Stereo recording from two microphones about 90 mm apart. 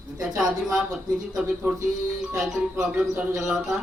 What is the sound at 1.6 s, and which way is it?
Speech, 20° right (ahead or behind).